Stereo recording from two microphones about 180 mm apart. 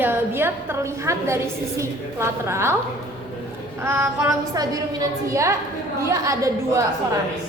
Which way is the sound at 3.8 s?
15° right (ahead or behind).